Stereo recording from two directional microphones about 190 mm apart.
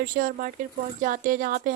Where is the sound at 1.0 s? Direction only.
45° right (ahead or behind).